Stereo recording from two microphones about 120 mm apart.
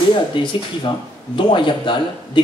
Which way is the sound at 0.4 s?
45° left (ahead or behind).